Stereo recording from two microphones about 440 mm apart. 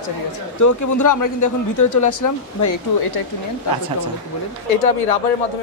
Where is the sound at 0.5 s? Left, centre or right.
Left.